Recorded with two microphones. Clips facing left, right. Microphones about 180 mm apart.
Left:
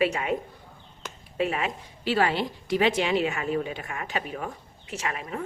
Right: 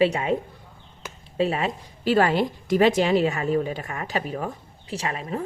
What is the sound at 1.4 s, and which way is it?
Speech, 35° right (ahead or behind).